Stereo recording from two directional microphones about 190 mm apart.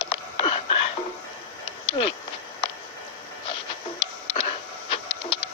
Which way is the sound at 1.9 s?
25° left (ahead or behind).